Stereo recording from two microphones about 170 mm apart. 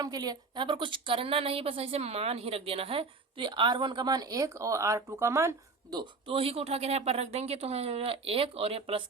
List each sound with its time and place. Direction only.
0.0 s a woman's voice: 25° right (ahead or behind)